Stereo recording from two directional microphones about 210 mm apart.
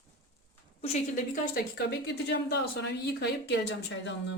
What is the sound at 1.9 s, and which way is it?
Speech, 50° left (ahead or behind).